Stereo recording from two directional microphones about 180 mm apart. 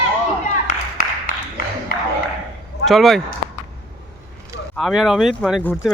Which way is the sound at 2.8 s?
Centre (ahead or behind).